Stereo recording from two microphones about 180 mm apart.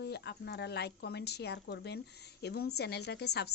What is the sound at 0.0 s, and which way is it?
Speech, 65° left (ahead or behind).